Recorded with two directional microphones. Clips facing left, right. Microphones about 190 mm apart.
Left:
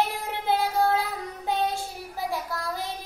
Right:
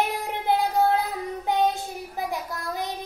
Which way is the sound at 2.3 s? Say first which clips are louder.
Even; 20° right (ahead or behind).